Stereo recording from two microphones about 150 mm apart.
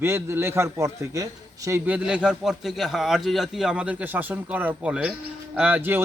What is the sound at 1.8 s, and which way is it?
A man's voice, 5° right (ahead or behind).